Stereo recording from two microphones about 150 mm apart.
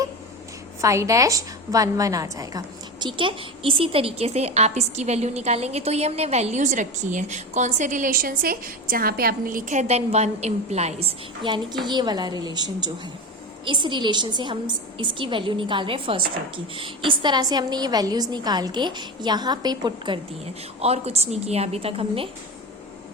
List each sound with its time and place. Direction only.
0.8 s a woman's voice: 20° right (ahead or behind)
3.2 s a woman's voice: 35° right (ahead or behind)
11.4 s a woman's voice: 30° right (ahead or behind)
20.4 s a woman's voice: 45° right (ahead or behind)